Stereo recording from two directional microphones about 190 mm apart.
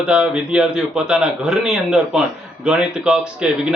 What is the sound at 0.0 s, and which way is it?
Speech, 5° right (ahead or behind).